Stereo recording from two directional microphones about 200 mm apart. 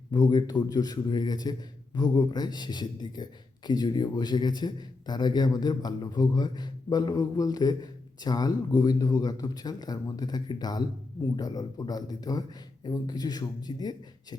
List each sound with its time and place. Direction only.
0.1 s a man's voice: 20° left (ahead or behind)